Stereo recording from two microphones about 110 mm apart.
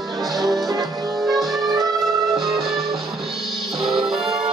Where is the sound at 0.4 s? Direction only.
Centre (ahead or behind).